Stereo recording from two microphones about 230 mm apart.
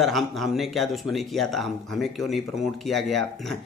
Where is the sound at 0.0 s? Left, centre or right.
Centre.